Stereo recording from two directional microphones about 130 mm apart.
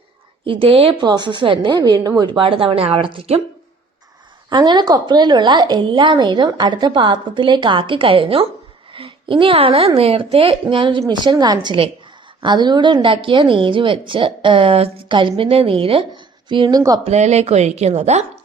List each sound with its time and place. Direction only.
0.4 s a woman's voice: 45° right (ahead or behind)
4.4 s a woman's voice: 35° right (ahead or behind)
17.0 s a woman's voice: 60° right (ahead or behind)